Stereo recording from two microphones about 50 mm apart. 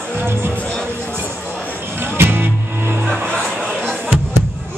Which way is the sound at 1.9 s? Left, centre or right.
Right.